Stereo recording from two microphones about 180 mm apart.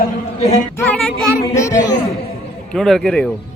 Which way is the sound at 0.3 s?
35° left (ahead or behind).